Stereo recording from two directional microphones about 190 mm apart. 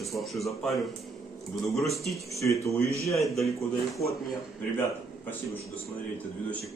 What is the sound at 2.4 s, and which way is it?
Speech, 15° left (ahead or behind).